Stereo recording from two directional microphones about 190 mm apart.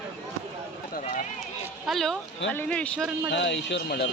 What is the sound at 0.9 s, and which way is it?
Run, 40° left (ahead or behind).